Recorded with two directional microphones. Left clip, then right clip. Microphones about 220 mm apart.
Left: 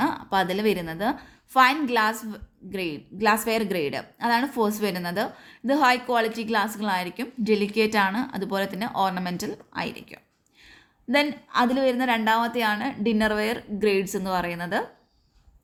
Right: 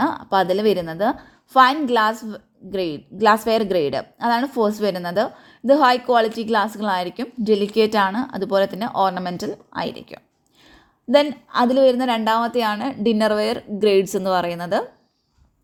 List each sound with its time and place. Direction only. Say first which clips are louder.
0.0 s a woman's voice: right 5 dB; 20° right (ahead or behind)